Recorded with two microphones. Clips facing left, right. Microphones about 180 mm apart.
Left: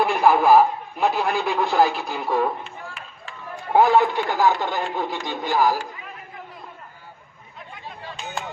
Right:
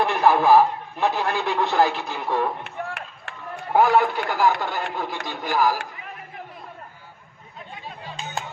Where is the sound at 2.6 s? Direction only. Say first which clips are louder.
Right 5 dB; 65° right (ahead or behind).